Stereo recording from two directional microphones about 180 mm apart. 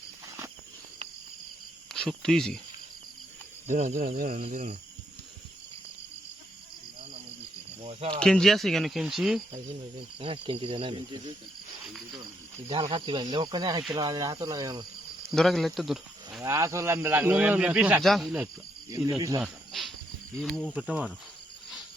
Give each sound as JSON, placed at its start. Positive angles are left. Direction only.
{"t": 1.9, "sound": "speech", "side_deg": 0}
{"t": 3.7, "sound": "speech", "side_deg": -45}
{"t": 7.8, "sound": "speech", "side_deg": -35}
{"t": 8.2, "sound": "speech", "side_deg": 5}
{"t": 10.2, "sound": "cricket", "side_deg": -30}
{"t": 12.2, "sound": "speech", "side_deg": -25}
{"t": 13.3, "sound": "cricket", "side_deg": -25}
{"t": 13.9, "sound": "speech", "side_deg": -20}
{"t": 15.3, "sound": "speech", "side_deg": 0}
{"t": 16.4, "sound": "a man's voice", "side_deg": -15}
{"t": 18.9, "sound": "speech", "side_deg": -20}
{"t": 19.4, "sound": "cricket", "side_deg": 0}
{"t": 20.4, "sound": "speech", "side_deg": 5}
{"t": 20.7, "sound": "a man's voice", "side_deg": -10}